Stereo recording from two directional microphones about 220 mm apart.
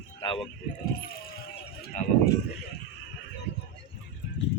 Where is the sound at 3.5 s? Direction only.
50° left (ahead or behind).